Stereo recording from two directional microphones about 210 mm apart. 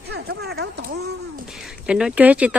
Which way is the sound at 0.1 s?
50° right (ahead or behind).